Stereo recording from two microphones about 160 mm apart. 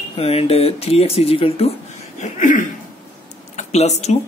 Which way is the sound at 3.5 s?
45° left (ahead or behind).